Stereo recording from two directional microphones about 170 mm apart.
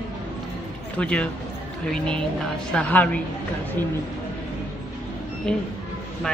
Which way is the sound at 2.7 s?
10° left (ahead or behind).